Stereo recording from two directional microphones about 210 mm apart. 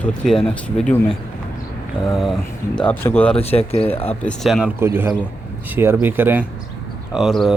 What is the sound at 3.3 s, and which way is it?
Speech, 30° left (ahead or behind).